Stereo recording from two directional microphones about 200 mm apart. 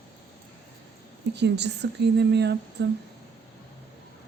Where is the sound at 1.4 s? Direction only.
60° right (ahead or behind).